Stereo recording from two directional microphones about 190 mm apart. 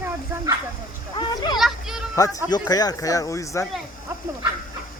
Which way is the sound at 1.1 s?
20° left (ahead or behind).